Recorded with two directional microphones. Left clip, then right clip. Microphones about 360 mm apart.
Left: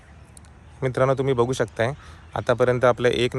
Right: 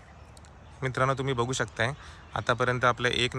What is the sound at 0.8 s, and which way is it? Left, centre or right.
Speech, centre.